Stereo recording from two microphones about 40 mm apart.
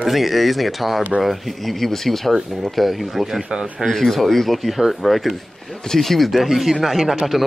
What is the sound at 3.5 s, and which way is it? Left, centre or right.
Speech, centre.